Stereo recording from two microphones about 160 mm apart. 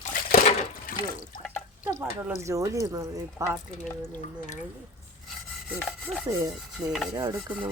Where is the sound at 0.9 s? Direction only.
60° left (ahead or behind).